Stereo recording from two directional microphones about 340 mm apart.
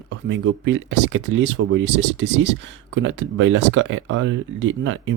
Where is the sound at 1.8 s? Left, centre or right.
Right.